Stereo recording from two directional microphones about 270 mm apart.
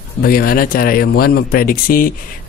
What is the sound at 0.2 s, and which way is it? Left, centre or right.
Speech, left.